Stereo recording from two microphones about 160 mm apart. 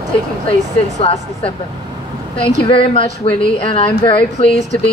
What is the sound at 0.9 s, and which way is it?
Speech, 40° left (ahead or behind).